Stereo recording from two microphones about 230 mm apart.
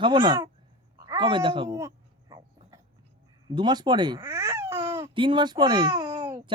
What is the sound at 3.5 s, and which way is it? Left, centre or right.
Speech, centre.